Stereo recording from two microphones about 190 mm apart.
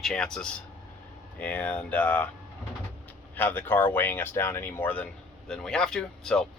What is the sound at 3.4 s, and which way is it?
Speech, 10° left (ahead or behind).